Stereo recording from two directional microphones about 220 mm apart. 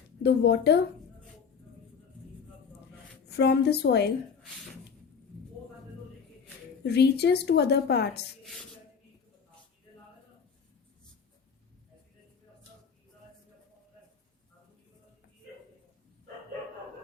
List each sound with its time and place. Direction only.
0.2 s a woman's voice: 50° left (ahead or behind)
3.2 s a woman's voice: 50° left (ahead or behind)
6.8 s a woman's voice: 50° left (ahead or behind)